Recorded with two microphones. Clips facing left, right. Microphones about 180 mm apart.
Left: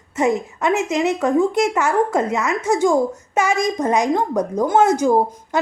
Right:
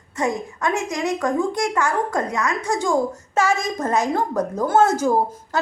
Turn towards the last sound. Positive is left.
turn(degrees=15)  # may be behind; listen again after turning